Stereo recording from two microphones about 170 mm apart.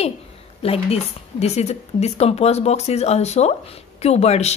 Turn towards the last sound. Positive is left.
turn(degrees=40)  # may be behind; listen again after turning